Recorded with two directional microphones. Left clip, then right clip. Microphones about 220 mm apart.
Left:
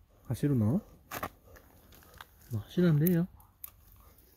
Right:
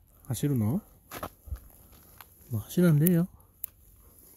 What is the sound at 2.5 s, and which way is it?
Speech, 30° right (ahead or behind).